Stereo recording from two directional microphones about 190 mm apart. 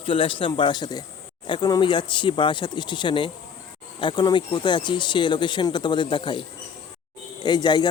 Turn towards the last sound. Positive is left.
turn(degrees=25)  # may be behind; listen again after turning